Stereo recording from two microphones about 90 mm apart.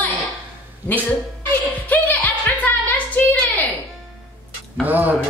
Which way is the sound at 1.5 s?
20° left (ahead or behind).